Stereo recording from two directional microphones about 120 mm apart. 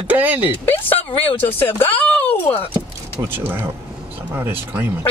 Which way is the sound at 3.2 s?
15° right (ahead or behind).